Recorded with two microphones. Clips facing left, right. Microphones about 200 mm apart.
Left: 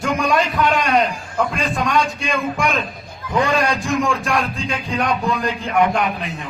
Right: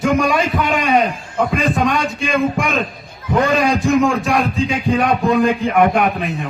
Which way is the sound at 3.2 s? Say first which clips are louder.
Right 4 dB; 25° right (ahead or behind).